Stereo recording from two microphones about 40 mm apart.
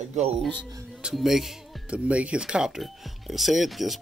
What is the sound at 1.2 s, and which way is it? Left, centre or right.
Speech, centre.